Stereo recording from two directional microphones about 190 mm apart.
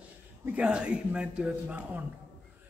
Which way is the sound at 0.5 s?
5° right (ahead or behind).